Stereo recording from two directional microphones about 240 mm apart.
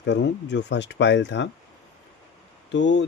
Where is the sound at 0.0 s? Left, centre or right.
Left.